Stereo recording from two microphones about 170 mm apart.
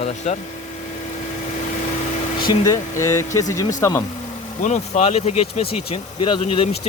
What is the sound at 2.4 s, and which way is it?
Speech, 20° left (ahead or behind).